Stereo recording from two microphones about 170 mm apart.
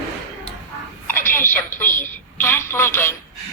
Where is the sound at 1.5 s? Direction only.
10° left (ahead or behind).